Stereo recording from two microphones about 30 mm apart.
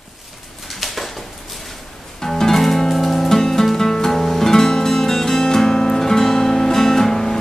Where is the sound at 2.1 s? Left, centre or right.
Centre.